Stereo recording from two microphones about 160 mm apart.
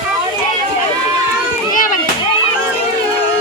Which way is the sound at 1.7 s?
55° left (ahead or behind).